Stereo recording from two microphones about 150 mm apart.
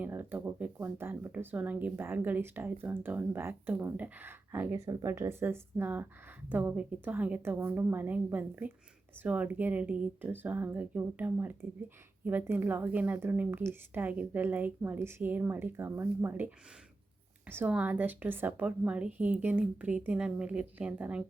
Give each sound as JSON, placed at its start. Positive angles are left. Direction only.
{"t": 0.0, "sound": "speech", "side_deg": -15}